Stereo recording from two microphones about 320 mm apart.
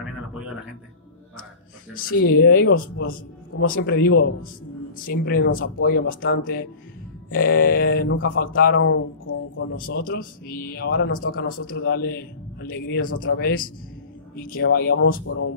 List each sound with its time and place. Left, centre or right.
2.0 s speech: left